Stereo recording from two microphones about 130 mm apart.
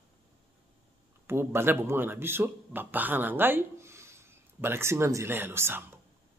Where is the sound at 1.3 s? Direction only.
20° right (ahead or behind).